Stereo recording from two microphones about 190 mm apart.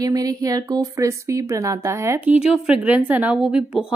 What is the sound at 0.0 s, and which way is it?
Speech, 20° right (ahead or behind).